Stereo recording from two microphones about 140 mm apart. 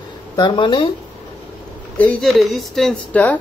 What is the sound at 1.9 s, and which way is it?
A woman's voice, 10° left (ahead or behind).